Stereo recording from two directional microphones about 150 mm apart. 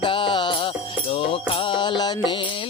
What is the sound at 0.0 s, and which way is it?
Music, 35° left (ahead or behind).